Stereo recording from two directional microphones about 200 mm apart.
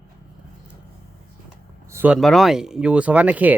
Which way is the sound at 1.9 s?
10° right (ahead or behind).